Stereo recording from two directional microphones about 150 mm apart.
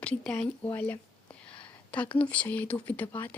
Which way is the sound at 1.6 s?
10° left (ahead or behind).